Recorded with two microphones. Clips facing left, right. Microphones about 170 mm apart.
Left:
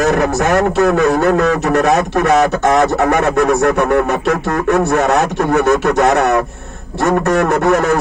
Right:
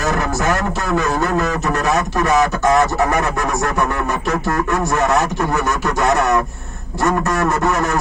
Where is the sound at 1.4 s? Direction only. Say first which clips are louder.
Left 6 dB; 65° left (ahead or behind).